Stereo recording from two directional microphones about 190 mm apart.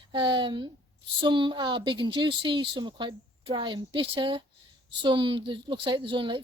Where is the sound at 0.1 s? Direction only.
25° right (ahead or behind).